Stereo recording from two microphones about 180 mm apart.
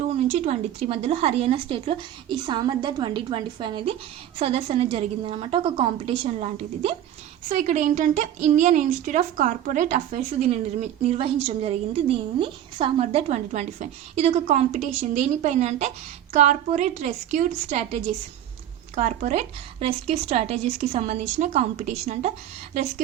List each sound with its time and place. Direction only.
0.2 s a woman's voice: 35° right (ahead or behind)
7.4 s a woman's voice: 45° right (ahead or behind)